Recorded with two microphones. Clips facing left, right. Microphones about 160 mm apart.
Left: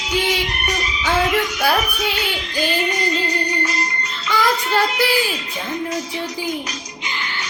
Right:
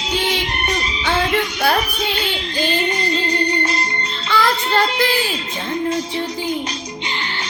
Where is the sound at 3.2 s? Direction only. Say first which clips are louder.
Right 3 dB; 30° right (ahead or behind).